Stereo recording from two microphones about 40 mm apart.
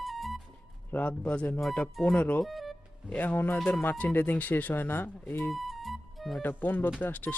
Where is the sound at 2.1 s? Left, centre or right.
Left.